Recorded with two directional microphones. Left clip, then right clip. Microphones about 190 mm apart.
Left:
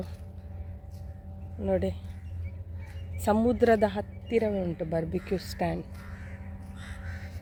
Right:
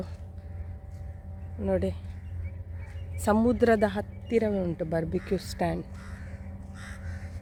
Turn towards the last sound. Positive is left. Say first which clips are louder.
# even
turn(degrees=-35)  # may be behind; listen again after turning